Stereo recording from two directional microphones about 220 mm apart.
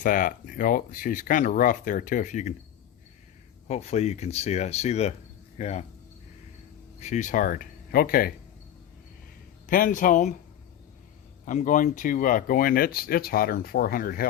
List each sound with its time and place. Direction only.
0.0 s speech: 40° left (ahead or behind)
3.7 s speech: 30° left (ahead or behind)
7.0 s speech: 35° left (ahead or behind)
9.6 s speech: 40° left (ahead or behind)
11.4 s speech: 35° left (ahead or behind)